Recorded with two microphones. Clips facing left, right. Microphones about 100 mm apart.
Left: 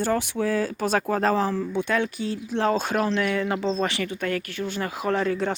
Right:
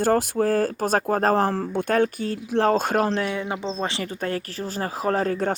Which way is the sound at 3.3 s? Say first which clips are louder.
Left 3 dB; 20° right (ahead or behind).